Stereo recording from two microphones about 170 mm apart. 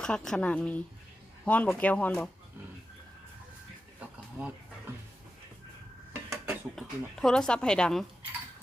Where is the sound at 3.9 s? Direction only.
5° right (ahead or behind).